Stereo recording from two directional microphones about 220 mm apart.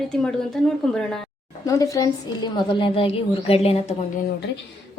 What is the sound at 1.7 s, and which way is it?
A woman's voice, 15° left (ahead or behind).